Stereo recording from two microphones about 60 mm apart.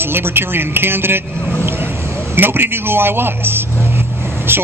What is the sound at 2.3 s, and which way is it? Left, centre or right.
A man's voice, right.